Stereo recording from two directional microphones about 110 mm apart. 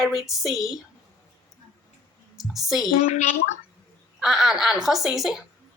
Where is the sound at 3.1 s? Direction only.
90° left.